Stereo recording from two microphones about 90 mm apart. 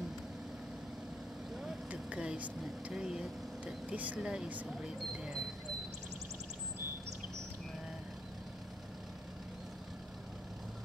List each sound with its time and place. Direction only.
1.6 s vehicle: 10° right (ahead or behind)
3.6 s speech: 15° right (ahead or behind)